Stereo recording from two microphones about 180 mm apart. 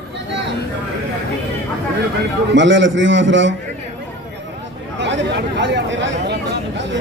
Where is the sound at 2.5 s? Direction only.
90° right.